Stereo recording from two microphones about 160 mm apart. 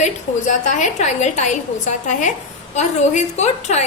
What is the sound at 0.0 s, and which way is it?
A woman's voice, 50° left (ahead or behind).